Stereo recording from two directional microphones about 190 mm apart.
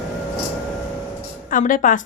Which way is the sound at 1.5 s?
45° left (ahead or behind).